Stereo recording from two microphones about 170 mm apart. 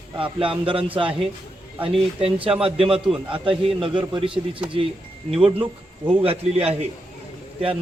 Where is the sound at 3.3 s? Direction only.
30° right (ahead or behind).